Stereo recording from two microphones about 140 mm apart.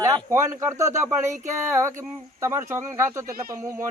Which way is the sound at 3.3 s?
90° right.